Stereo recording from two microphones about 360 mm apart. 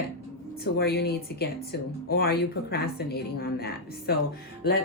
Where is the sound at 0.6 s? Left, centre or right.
Left.